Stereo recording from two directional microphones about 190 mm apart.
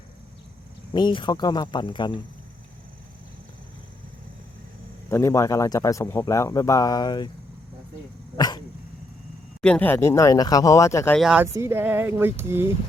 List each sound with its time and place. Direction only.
0.9 s speech: 25° left (ahead or behind)
5.0 s speech: 15° left (ahead or behind)
8.4 s speech: 20° left (ahead or behind)
9.6 s speech: 5° left (ahead or behind)
11.2 s speech: 5° right (ahead or behind)